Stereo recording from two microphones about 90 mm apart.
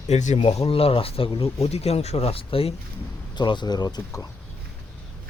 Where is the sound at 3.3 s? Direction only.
55° left (ahead or behind).